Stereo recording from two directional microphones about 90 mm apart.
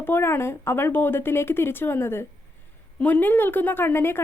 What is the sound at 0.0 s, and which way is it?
A woman's voice, 25° left (ahead or behind).